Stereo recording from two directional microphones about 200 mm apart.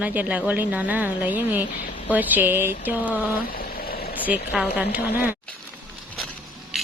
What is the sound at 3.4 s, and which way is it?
Vehicle, 45° left (ahead or behind).